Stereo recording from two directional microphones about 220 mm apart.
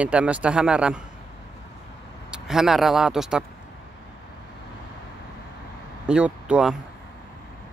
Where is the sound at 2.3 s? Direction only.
Centre (ahead or behind).